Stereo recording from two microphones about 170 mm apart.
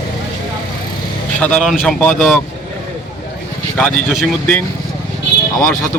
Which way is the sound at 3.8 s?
Centre (ahead or behind).